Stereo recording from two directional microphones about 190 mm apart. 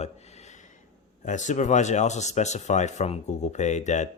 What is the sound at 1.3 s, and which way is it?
Speech, 40° left (ahead or behind).